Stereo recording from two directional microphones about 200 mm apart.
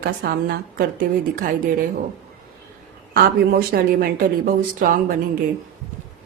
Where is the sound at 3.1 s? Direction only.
50° right (ahead or behind).